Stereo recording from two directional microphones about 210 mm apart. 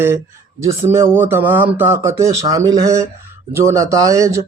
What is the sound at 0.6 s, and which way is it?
Speech, 15° right (ahead or behind).